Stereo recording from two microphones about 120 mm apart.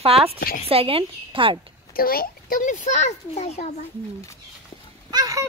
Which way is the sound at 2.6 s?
90° left.